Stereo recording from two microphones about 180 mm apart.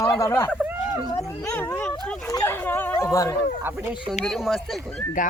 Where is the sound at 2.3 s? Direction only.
10° left (ahead or behind).